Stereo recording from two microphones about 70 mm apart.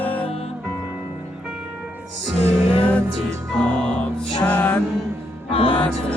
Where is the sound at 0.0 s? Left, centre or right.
Left.